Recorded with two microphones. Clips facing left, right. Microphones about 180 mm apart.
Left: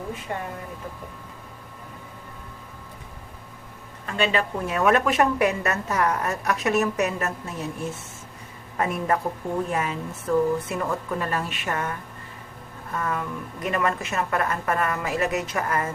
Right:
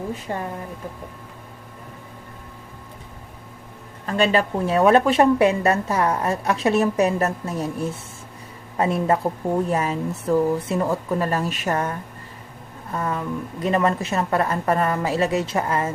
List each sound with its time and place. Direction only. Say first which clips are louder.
0.3 s a woman's voice: right 3 dB; 35° right (ahead or behind)
4.0 s a woman's voice: right 5 dB; 40° right (ahead or behind)
8.8 s a woman's voice: right 4 dB; 30° right (ahead or behind)
9.6 s a woman's voice: right 5 dB; 40° right (ahead or behind)